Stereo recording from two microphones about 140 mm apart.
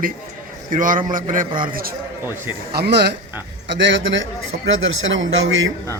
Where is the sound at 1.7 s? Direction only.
90° right.